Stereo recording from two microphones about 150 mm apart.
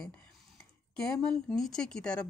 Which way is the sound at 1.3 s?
5° left (ahead or behind).